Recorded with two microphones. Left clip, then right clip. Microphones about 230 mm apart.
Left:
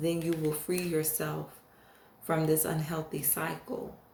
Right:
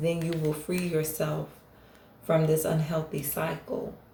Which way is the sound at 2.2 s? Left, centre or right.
Left.